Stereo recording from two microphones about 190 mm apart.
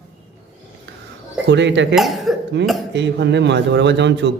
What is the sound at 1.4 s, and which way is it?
Speech, 65° right (ahead or behind).